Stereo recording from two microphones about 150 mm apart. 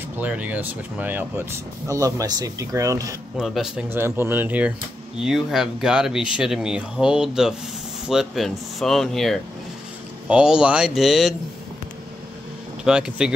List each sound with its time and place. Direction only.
0.2 s speech: 10° right (ahead or behind)
3.3 s speech: centre (ahead or behind)
3.9 s speech: 15° right (ahead or behind)
12.8 s speech: 5° right (ahead or behind)